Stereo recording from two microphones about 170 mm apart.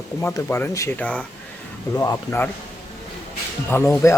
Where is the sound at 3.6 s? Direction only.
15° left (ahead or behind).